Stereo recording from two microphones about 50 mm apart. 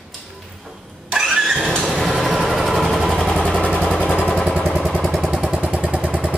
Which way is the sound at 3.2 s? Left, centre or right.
Centre.